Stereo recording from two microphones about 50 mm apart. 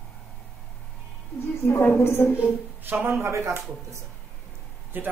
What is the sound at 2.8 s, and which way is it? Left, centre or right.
Speech, right.